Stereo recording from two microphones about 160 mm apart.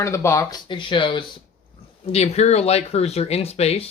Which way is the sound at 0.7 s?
30° left (ahead or behind).